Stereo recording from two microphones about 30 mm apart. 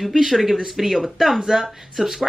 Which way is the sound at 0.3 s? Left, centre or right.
Centre.